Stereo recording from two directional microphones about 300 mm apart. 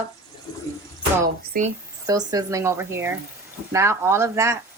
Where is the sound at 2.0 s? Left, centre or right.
Centre.